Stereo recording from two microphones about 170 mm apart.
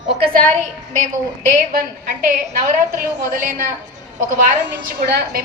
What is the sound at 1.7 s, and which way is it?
A woman's voice, 60° right (ahead or behind).